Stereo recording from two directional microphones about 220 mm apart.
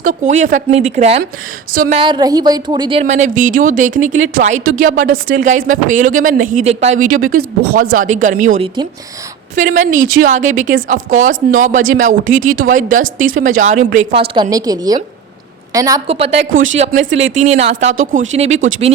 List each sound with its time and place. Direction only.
0.0 s speech: 35° right (ahead or behind)
1.7 s speech: 40° right (ahead or behind)
2.0 s a woman's voice: 20° right (ahead or behind)
3.0 s speech: 35° right (ahead or behind)
9.6 s a woman's voice: 35° right (ahead or behind); by 16.0 s 15° right (ahead or behind)
16.0 s a woman's voice: 25° right (ahead or behind)
16.5 s speech: 65° right (ahead or behind)
16.7 s a woman's voice: 30° right (ahead or behind)